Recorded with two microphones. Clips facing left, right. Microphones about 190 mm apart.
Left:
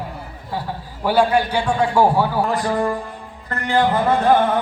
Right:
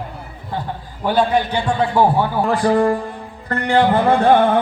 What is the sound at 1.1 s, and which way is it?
Speech, 10° left (ahead or behind).